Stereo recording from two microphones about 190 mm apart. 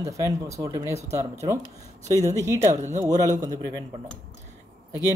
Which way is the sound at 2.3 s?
15° right (ahead or behind).